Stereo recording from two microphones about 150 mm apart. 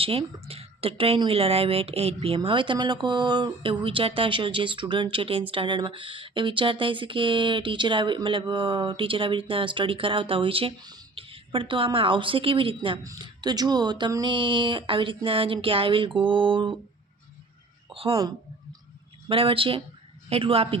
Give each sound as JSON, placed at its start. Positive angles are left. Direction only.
{"t": 0.0, "sound": "speech", "side_deg": -40}
{"t": 13.0, "sound": "speech", "side_deg": -25}
{"t": 17.8, "sound": "a woman's voice", "side_deg": -35}
{"t": 19.3, "sound": "speech", "side_deg": -35}